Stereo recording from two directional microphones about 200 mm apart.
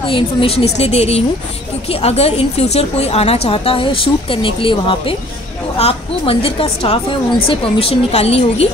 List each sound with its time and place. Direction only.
0.0 s a woman's voice: 25° left (ahead or behind)